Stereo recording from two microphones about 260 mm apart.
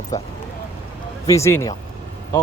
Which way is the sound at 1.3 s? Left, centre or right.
Centre.